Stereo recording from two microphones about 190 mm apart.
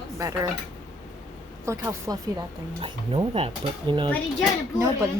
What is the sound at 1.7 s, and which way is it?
Speech, 15° right (ahead or behind).